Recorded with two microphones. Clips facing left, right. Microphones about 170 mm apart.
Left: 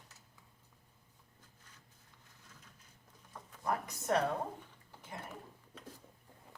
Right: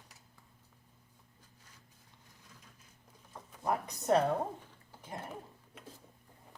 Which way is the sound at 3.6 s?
20° right (ahead or behind).